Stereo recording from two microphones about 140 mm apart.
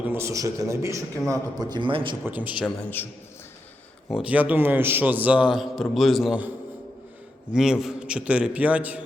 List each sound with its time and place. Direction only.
0.0 s a man's voice: 15° right (ahead or behind); by 2.1 s 40° right (ahead or behind)
2.2 s a man's voice: 10° right (ahead or behind)
2.6 s a man's voice: 15° left (ahead or behind)
4.1 s a man's voice: 10° right (ahead or behind)
7.5 s a man's voice: 5° right (ahead or behind)